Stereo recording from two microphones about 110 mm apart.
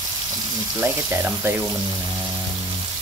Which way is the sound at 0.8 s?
15° right (ahead or behind).